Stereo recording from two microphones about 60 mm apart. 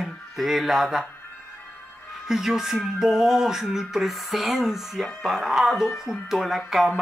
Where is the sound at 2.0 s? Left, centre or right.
Centre.